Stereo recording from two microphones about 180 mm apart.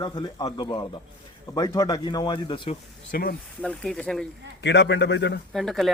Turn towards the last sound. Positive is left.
turn(degrees=0)  # may be behind; listen again after turning